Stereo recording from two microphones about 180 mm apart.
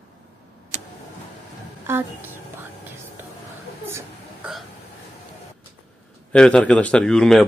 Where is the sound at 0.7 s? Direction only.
45° right (ahead or behind).